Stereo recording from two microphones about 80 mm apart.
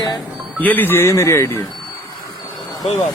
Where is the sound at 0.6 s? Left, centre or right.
Left.